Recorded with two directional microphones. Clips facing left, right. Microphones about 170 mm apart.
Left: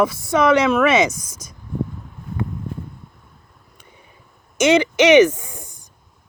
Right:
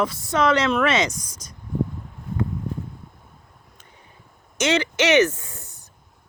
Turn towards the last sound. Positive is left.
turn(degrees=10)  # may be behind; listen again after turning